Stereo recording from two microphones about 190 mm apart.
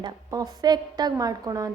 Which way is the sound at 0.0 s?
20° right (ahead or behind).